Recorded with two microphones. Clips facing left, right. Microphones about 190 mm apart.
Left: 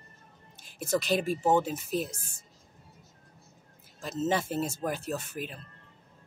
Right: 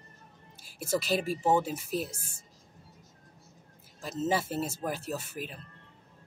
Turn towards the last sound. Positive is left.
turn(degrees=-5)  # may be behind; listen again after turning